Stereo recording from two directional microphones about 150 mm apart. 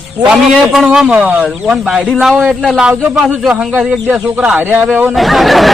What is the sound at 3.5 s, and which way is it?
Speech, 10° right (ahead or behind).